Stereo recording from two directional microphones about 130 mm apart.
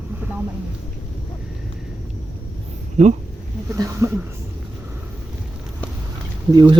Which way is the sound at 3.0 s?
60° right (ahead or behind).